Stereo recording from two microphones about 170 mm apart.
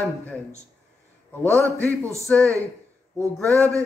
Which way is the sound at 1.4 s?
15° right (ahead or behind).